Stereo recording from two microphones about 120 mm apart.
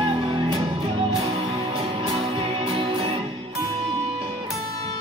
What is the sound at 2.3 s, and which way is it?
Music, 50° right (ahead or behind).